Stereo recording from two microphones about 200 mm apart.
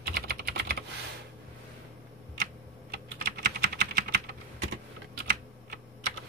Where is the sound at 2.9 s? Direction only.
55° right (ahead or behind).